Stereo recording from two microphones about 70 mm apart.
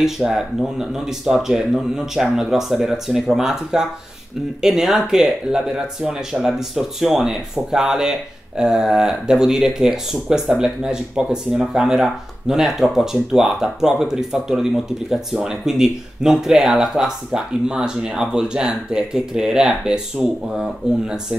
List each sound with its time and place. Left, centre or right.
0.0 s speech: centre